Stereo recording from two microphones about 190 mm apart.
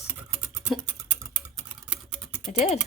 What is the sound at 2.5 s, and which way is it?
Speech, 40° left (ahead or behind).